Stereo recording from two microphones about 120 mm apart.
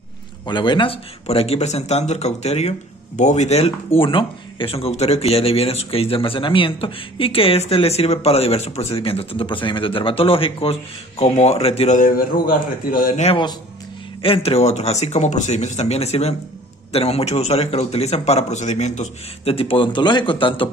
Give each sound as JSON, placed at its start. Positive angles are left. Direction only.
{"t": 0.5, "sound": "a man's voice", "side_deg": 40}
{"t": 1.2, "sound": "speech", "side_deg": 60}
{"t": 13.1, "sound": "speech", "side_deg": 65}
{"t": 14.2, "sound": "speech", "side_deg": 50}
{"t": 19.4, "sound": "speech", "side_deg": 50}